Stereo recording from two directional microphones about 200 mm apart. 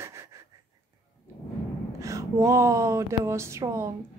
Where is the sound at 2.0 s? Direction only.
15° right (ahead or behind).